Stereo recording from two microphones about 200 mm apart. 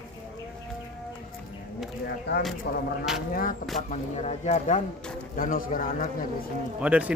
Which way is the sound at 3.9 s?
35° left (ahead or behind).